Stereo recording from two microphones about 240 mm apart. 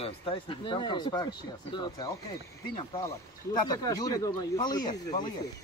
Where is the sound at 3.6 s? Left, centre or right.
Centre.